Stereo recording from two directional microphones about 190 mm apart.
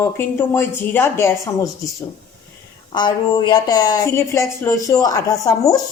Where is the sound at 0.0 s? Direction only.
10° left (ahead or behind).